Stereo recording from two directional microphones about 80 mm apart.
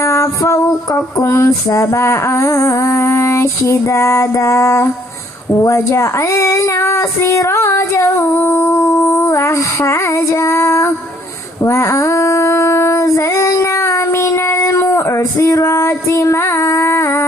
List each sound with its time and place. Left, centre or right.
0.0 s music: left
11.6 s female singing: left